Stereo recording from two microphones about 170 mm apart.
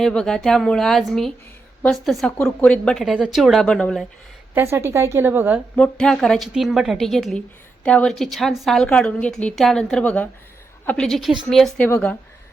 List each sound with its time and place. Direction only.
0.0 s a woman's voice: 5° left (ahead or behind)
4.5 s a woman's voice: 15° right (ahead or behind)
5.7 s a woman's voice: 5° left (ahead or behind)